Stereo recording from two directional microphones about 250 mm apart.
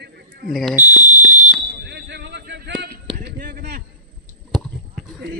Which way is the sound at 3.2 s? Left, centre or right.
Right.